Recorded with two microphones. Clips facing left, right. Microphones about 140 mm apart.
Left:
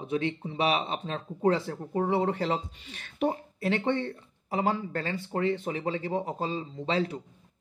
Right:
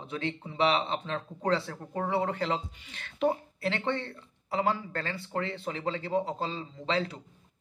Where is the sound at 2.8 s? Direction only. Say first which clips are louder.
Left 1 dB; 70° right (ahead or behind).